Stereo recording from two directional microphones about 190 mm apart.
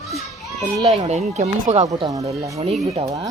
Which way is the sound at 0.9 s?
35° right (ahead or behind).